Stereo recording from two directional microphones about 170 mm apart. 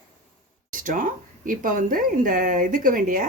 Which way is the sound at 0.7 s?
50° right (ahead or behind).